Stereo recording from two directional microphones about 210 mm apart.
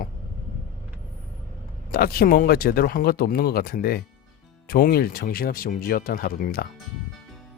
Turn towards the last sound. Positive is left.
turn(degrees=45)  # may be behind; listen again after turning